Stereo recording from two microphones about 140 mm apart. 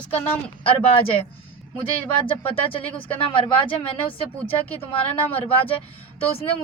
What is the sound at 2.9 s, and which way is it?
Speech, 40° left (ahead or behind).